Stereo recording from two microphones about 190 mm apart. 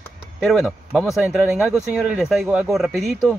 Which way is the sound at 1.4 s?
15° right (ahead or behind).